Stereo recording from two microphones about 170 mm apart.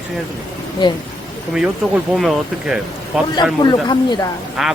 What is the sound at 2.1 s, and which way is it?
Speech, centre (ahead or behind).